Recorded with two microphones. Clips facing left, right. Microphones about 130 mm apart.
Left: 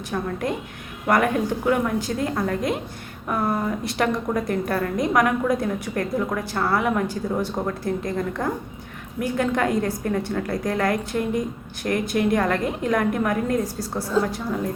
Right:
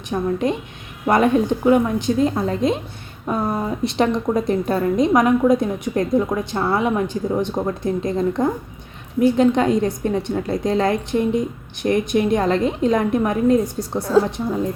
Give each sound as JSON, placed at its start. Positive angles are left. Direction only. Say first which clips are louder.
{"t": 0.1, "sound": "a woman's voice", "louder": "right 6 dB", "side_deg": -20}